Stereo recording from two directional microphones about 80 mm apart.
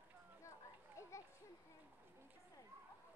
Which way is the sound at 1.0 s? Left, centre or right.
Left.